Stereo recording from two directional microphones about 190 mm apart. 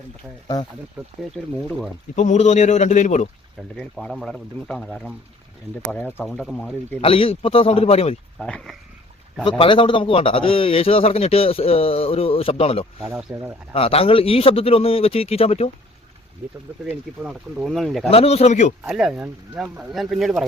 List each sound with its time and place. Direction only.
1.0 s speech: 10° right (ahead or behind)
2.1 s a man's voice: 40° left (ahead or behind)
3.8 s speech: centre (ahead or behind)
7.0 s a man's voice: 30° left (ahead or behind)
8.4 s speech: 5° left (ahead or behind)
9.4 s a man's voice: 25° left (ahead or behind)
13.1 s speech: 10° right (ahead or behind)
13.7 s a man's voice: 30° left (ahead or behind)
17.2 s speech: centre (ahead or behind)
18.1 s a man's voice: 30° left (ahead or behind)
18.9 s speech: 5° right (ahead or behind)